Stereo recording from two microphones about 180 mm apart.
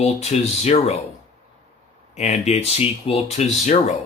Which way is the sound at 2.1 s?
40° left (ahead or behind).